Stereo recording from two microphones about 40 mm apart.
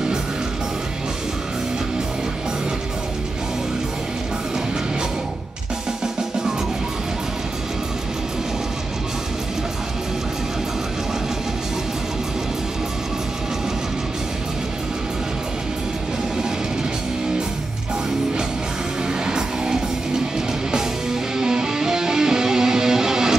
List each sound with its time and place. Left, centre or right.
19.2 s music: centre